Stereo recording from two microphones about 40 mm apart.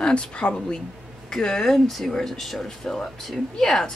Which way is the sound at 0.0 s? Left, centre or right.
Left.